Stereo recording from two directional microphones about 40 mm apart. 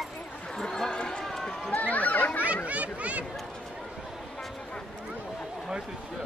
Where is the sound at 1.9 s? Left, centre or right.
Left.